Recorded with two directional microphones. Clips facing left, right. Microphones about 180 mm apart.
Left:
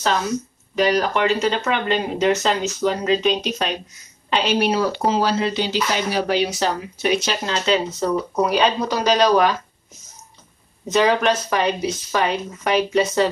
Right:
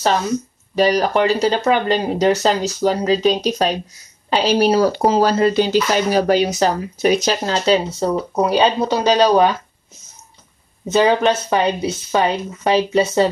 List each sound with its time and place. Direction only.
0.7 s speech: 35° right (ahead or behind)
10.9 s speech: 25° right (ahead or behind)